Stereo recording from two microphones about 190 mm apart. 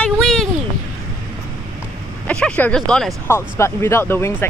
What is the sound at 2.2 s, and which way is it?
Speech, 5° left (ahead or behind).